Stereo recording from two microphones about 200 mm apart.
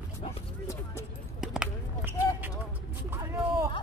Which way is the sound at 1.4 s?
5° right (ahead or behind).